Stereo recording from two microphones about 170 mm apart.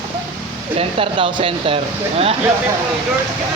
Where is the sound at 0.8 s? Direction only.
35° right (ahead or behind).